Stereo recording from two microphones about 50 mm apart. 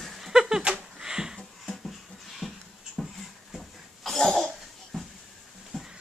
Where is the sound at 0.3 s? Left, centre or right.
Centre.